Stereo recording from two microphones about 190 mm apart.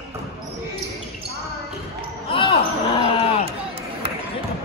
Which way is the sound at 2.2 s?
30° left (ahead or behind).